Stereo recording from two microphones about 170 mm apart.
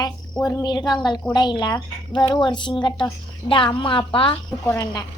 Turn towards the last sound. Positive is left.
turn(degrees=25)  # may be behind; listen again after turning